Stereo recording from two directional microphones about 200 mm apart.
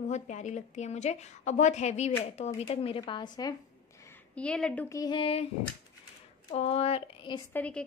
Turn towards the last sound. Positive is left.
turn(degrees=5)  # may be behind; listen again after turning